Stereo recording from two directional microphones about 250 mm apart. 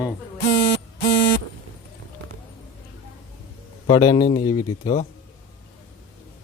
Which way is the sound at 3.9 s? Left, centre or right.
Centre.